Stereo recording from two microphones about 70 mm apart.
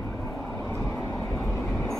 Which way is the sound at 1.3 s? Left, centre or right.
Left.